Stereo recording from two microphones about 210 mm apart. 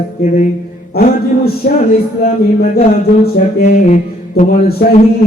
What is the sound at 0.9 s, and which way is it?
Speech, 45° left (ahead or behind).